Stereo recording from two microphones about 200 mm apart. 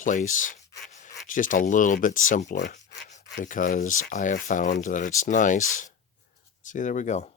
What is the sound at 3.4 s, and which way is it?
Rub, 40° left (ahead or behind).